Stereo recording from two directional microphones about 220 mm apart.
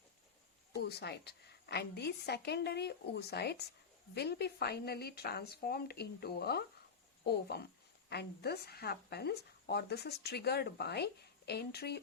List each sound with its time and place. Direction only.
0.8 s speech: 50° left (ahead or behind)